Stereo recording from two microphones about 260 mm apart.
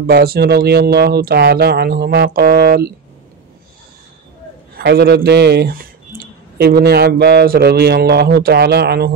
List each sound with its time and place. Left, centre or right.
0.0 s speech: right
4.7 s speech: right